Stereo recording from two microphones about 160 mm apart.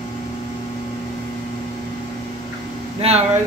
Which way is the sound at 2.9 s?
40° right (ahead or behind).